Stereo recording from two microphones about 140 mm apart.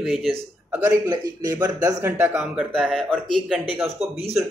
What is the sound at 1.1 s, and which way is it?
Speech, 30° right (ahead or behind).